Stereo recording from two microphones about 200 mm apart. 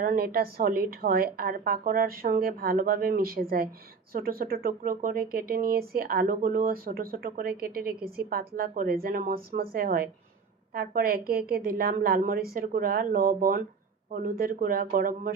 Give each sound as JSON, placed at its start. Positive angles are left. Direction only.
{"t": 0.0, "sound": "speech", "side_deg": -45}